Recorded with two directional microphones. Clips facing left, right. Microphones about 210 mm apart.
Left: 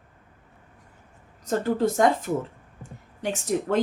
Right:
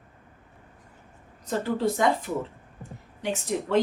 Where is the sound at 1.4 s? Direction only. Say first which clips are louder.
Left 3 dB; 45° left (ahead or behind).